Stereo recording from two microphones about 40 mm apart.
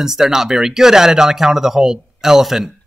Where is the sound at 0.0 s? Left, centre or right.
Centre.